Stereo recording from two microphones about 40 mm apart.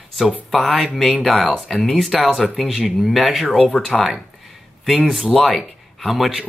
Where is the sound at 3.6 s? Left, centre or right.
Left.